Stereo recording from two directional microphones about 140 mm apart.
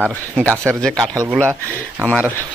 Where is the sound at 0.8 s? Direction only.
5° left (ahead or behind).